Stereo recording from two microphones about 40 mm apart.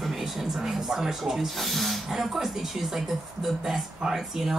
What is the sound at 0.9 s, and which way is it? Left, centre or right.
Speech, centre.